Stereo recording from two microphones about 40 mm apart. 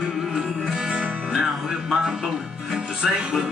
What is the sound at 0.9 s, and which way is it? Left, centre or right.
Music, centre.